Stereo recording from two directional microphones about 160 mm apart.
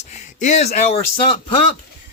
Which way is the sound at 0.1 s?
50° left (ahead or behind).